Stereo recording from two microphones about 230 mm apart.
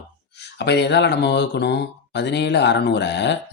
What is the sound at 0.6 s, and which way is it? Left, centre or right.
Speech, left.